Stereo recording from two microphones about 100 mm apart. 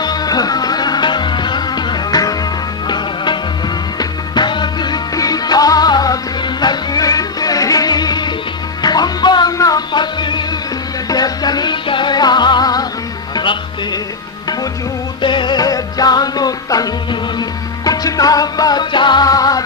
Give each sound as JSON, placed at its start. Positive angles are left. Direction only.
{"t": 0.0, "sound": "music", "side_deg": 45}
{"t": 4.4, "sound": "music", "side_deg": 50}
{"t": 15.2, "sound": "music", "side_deg": 50}